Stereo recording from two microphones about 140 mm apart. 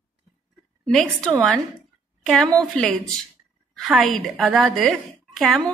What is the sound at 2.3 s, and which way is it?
A woman's voice, centre (ahead or behind).